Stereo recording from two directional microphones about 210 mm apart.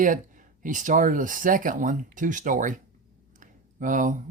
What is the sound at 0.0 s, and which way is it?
Speech, 40° right (ahead or behind).